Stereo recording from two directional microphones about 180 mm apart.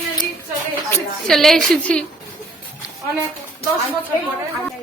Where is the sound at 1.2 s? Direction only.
Centre (ahead or behind).